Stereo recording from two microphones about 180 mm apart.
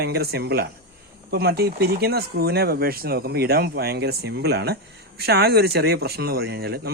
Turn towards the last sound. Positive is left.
turn(degrees=-60)  # may be behind; listen again after turning